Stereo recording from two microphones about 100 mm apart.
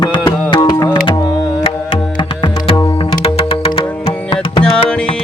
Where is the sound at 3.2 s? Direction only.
70° left (ahead or behind).